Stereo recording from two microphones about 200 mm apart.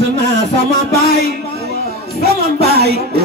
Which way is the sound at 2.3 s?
55° right (ahead or behind).